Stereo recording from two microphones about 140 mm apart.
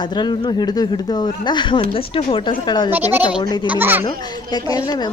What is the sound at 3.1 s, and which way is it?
Speech, 10° right (ahead or behind).